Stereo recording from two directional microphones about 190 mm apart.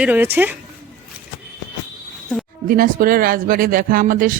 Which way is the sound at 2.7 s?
50° right (ahead or behind).